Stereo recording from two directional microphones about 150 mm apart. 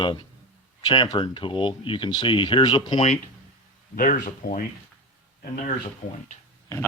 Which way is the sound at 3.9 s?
65° left (ahead or behind).